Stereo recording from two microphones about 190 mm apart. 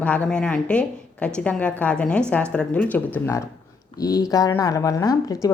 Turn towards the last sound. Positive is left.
turn(degrees=20)  # may be behind; listen again after turning